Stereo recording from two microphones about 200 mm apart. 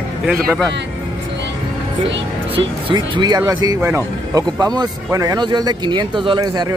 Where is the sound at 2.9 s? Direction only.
20° right (ahead or behind).